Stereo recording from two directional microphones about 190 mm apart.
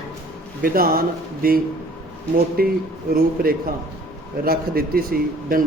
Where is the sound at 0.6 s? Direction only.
50° right (ahead or behind).